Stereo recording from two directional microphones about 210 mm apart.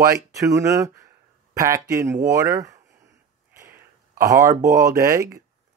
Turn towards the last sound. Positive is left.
turn(degrees=-15)  # may be behind; listen again after turning